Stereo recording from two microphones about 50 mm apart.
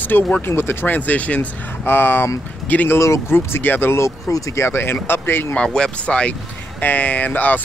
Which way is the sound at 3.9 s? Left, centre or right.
Left.